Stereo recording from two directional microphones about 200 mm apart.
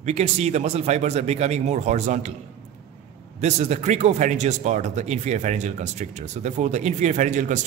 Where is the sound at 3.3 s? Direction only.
35° right (ahead or behind).